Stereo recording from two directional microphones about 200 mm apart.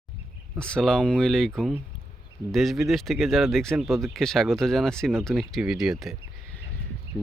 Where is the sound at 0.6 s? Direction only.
5° left (ahead or behind).